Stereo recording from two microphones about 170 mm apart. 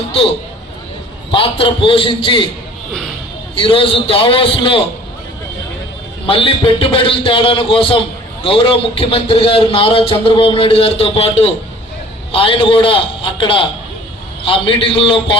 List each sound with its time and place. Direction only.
1.3 s a man's voice: 30° left (ahead or behind)
3.5 s a man's voice: 30° left (ahead or behind)
6.2 s a man's voice: 30° left (ahead or behind)